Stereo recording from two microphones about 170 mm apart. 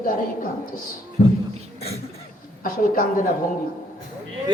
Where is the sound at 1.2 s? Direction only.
55° left (ahead or behind).